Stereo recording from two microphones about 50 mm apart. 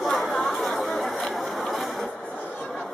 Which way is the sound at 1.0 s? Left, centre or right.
Centre.